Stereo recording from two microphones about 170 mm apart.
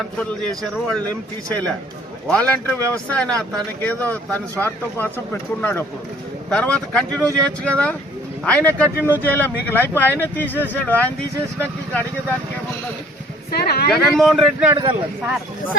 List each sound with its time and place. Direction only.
0.0 s a man's voice: 5° left (ahead or behind)
2.2 s speech: 5° left (ahead or behind)
8.8 s speech: 15° right (ahead or behind)
9.2 s speech: 10° left (ahead or behind)
13.5 s a woman's voice: 65° left (ahead or behind)
13.9 s a man's voice: centre (ahead or behind)
14.7 s speech: 25° right (ahead or behind)